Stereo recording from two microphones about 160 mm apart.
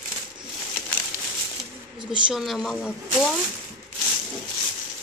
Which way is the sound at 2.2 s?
Centre (ahead or behind).